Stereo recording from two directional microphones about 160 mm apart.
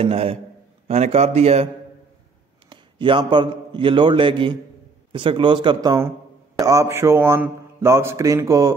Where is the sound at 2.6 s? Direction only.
30° right (ahead or behind).